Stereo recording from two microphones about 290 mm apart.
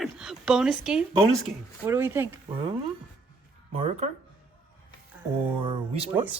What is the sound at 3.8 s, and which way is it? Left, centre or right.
Speech, right.